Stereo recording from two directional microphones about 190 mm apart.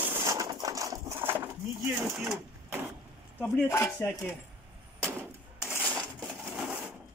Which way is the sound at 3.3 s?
15° left (ahead or behind).